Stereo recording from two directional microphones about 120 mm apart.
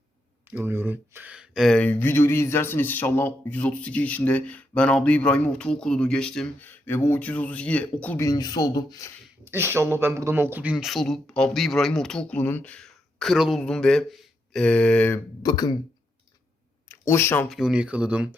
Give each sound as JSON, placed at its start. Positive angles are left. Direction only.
{"t": 0.5, "sound": "speech", "side_deg": -20}
{"t": 1.7, "sound": "speech", "side_deg": 15}
{"t": 6.7, "sound": "speech", "side_deg": 15}
{"t": 8.2, "sound": "speech", "side_deg": 30}
{"t": 9.4, "sound": "speech", "side_deg": -20}
{"t": 15.4, "sound": "speech", "side_deg": 35}
{"t": 16.9, "sound": "speech", "side_deg": 20}
{"t": 17.5, "sound": "speech", "side_deg": -5}